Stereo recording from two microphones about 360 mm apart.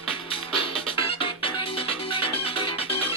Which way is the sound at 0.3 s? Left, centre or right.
Centre.